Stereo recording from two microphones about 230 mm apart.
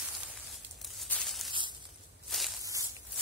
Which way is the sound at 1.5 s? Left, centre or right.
Right.